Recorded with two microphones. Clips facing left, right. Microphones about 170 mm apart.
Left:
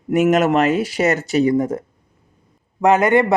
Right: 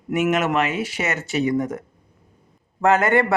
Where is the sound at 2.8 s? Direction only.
15° left (ahead or behind).